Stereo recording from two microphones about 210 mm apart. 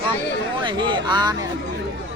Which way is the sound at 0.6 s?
20° right (ahead or behind).